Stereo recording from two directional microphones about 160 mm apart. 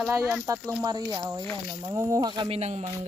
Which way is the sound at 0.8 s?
20° right (ahead or behind).